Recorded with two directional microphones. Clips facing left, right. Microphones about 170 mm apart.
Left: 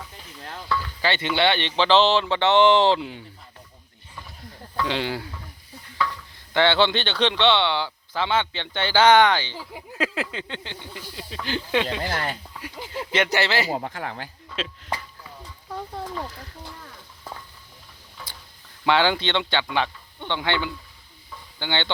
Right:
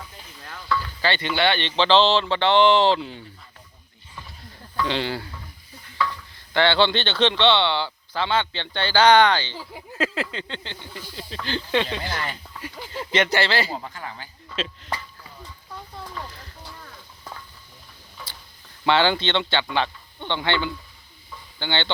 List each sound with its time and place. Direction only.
1.0 s speech: 20° left (ahead or behind)
4.8 s speech: 10° left (ahead or behind)
6.5 s speech: 15° left (ahead or behind)
12.0 s speech: 45° left (ahead or behind)
12.9 s speech: 10° left (ahead or behind)
13.7 s speech: 65° left (ahead or behind)
14.5 s speech: 10° left (ahead or behind)
18.9 s speech: 10° left (ahead or behind)